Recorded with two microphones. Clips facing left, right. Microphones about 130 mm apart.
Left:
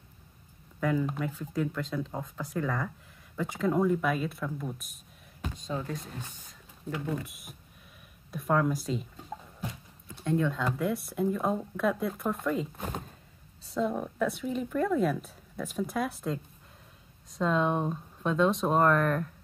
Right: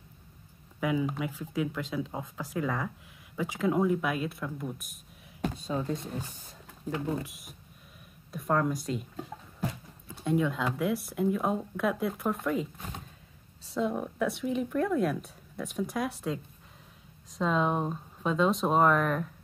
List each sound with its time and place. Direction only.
0.7 s speech: 5° right (ahead or behind)
5.7 s speech: 10° right (ahead or behind)
6.9 s speech: 25° right (ahead or behind)
7.2 s speech: centre (ahead or behind)
10.0 s speech: 10° right (ahead or behind)
12.7 s speech: 50° left (ahead or behind)
13.7 s speech: 5° right (ahead or behind)
17.4 s speech: centre (ahead or behind)